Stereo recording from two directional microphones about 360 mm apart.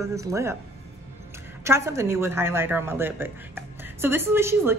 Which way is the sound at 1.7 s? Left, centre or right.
Centre.